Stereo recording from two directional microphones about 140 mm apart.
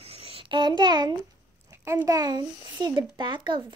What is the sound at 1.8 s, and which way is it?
A child's voice, 25° right (ahead or behind).